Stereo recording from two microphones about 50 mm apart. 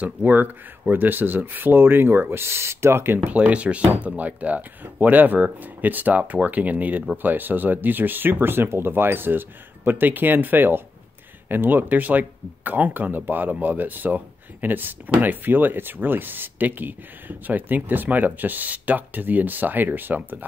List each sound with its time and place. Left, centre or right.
0.0 s speech: right
3.3 s speech: right